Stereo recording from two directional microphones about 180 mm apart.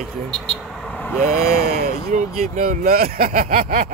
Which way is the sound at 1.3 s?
60° right (ahead or behind).